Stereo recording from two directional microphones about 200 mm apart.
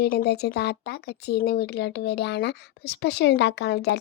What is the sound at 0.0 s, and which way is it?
Speech, 50° left (ahead or behind).